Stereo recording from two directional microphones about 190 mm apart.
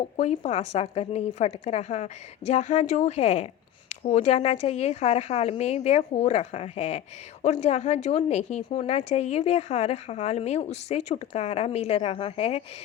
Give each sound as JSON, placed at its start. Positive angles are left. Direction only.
{"t": 0.2, "sound": "a woman's voice", "side_deg": 35}